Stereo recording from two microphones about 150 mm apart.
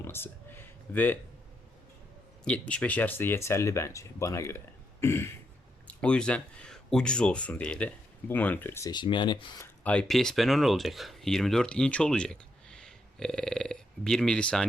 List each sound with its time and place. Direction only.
0.0 s a sound: 15° left (ahead or behind)
2.4 s speech: 5° left (ahead or behind)
8.9 s speech: 30° left (ahead or behind)
9.8 s speech: 5° left (ahead or behind)